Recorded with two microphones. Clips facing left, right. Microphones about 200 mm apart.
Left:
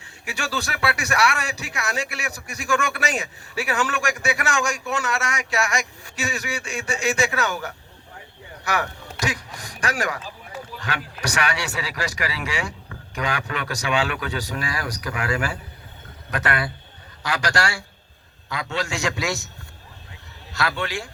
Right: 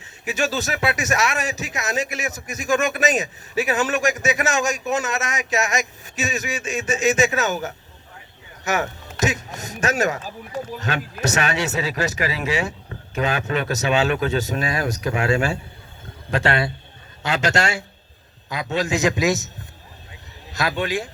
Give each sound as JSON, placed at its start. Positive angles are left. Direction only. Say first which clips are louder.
{"t": 0.0, "sound": "speech", "louder": "right 8 dB", "side_deg": -20}
{"t": 20.5, "sound": "speech", "louder": "right 3 dB", "side_deg": -20}